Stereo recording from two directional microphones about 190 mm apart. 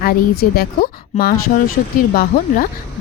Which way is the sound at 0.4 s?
45° left (ahead or behind).